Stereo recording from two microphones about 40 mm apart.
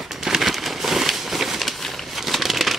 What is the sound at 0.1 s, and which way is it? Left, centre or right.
Crumpling, centre.